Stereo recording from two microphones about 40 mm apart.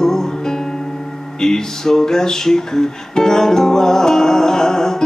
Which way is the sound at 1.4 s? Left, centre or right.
Centre.